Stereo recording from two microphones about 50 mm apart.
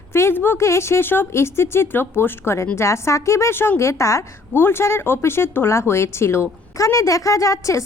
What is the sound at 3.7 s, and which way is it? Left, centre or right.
Speech, left.